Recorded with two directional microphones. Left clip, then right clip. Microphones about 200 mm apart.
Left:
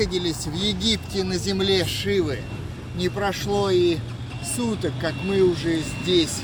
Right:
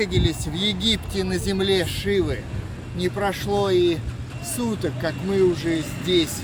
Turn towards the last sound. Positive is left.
turn(degrees=-5)  # may be behind; listen again after turning